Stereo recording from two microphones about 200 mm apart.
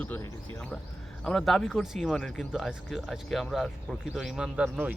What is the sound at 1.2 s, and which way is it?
Speech, centre (ahead or behind).